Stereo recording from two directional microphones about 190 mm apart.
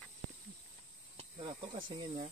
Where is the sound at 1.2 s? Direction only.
30° right (ahead or behind).